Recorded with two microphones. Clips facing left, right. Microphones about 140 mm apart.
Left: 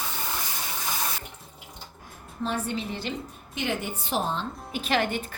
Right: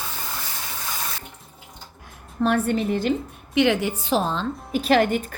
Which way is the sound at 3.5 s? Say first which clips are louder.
Right 11 dB; 80° right.